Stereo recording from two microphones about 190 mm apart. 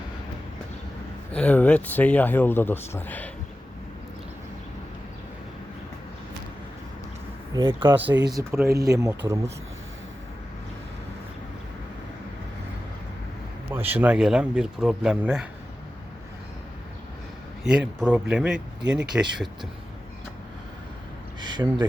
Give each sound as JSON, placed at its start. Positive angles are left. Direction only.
{"t": 1.3, "sound": "a man's voice", "side_deg": 5}
{"t": 8.0, "sound": "speech", "side_deg": -65}
{"t": 8.3, "sound": "speech", "side_deg": -15}
{"t": 13.7, "sound": "speech", "side_deg": -10}
{"t": 17.6, "sound": "speech", "side_deg": -5}
{"t": 21.4, "sound": "speech", "side_deg": -25}